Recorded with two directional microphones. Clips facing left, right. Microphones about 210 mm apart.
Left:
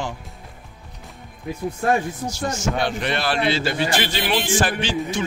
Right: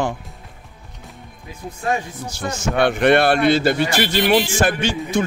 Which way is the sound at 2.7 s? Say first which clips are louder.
Right 9 dB; 60° right (ahead or behind).